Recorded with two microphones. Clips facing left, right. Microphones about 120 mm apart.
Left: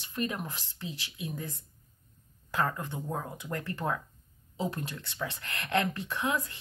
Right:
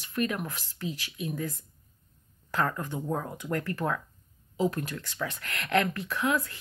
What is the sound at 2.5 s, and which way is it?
Speech, 15° left (ahead or behind).